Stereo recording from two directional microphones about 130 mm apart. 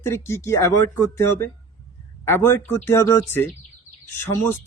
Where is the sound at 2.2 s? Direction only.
20° left (ahead or behind).